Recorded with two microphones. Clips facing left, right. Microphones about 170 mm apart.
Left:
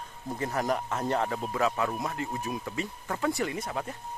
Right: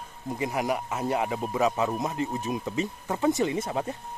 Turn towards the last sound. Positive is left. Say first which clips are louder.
# right 5 dB
turn(degrees=-25)  # may be behind; listen again after turning